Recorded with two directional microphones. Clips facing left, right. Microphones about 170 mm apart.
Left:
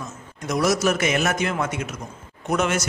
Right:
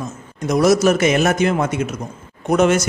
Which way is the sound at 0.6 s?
40° right (ahead or behind).